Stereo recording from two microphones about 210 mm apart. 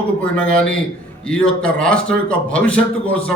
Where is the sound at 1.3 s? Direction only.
5° left (ahead or behind).